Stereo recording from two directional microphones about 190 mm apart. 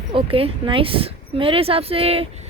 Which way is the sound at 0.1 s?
30° right (ahead or behind).